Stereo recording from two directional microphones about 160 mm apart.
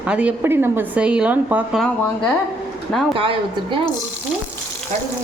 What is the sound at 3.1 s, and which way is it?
Speech, 35° right (ahead or behind).